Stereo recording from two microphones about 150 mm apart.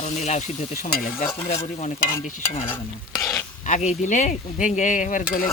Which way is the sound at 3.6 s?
55° left (ahead or behind).